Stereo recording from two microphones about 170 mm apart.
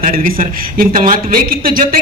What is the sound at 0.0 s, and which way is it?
Speech, 55° right (ahead or behind).